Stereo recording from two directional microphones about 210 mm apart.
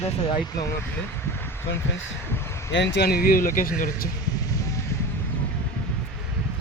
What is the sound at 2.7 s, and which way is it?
Speech, 55° left (ahead or behind).